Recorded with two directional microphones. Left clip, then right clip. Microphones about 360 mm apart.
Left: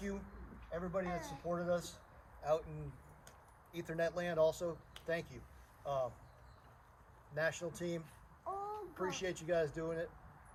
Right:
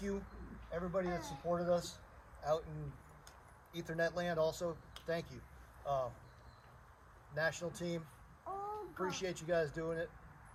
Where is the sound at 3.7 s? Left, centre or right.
Centre.